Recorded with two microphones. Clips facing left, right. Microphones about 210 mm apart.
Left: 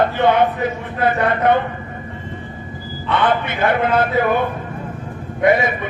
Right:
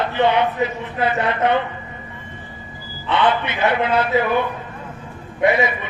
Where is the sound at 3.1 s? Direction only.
50° left (ahead or behind).